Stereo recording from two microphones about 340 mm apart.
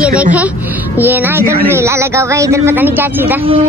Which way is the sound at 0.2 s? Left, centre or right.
Centre.